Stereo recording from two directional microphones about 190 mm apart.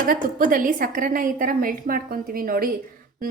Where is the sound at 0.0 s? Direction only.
45° right (ahead or behind).